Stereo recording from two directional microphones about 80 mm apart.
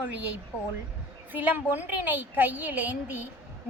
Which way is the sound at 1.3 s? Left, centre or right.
Right.